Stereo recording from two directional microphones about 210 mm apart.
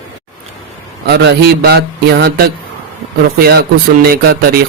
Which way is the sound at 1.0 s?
50° right (ahead or behind).